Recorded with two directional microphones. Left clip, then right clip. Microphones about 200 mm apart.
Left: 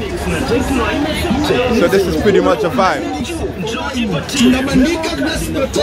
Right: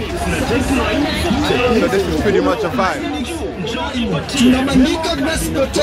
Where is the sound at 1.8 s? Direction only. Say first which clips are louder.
Left 3 dB; 20° left (ahead or behind).